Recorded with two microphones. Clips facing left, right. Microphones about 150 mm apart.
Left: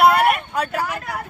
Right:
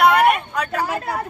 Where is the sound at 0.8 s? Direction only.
25° right (ahead or behind).